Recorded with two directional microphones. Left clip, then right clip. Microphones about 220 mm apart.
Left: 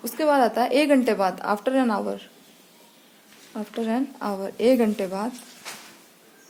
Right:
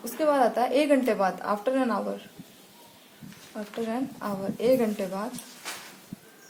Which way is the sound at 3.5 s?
45° left (ahead or behind).